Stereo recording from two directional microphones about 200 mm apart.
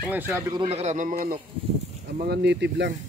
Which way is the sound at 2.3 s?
60° right (ahead or behind).